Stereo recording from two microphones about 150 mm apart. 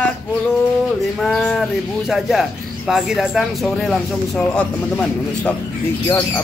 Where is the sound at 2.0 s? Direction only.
Centre (ahead or behind).